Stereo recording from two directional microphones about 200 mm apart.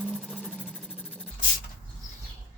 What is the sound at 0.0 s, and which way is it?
Vehicle, 5° left (ahead or behind).